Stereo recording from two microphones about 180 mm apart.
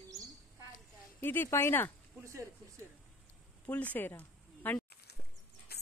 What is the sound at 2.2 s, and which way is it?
Speech, 15° right (ahead or behind).